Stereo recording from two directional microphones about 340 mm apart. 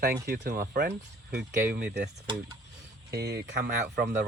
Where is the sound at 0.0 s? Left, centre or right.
Right.